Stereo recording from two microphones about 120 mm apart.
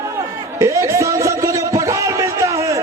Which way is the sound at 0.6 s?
25° right (ahead or behind).